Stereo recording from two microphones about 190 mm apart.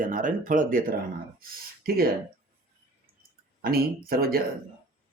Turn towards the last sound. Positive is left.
turn(degrees=-50)  # may be behind; listen again after turning